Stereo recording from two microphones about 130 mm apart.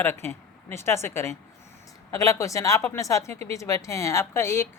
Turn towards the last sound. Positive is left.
turn(degrees=20)  # may be behind; listen again after turning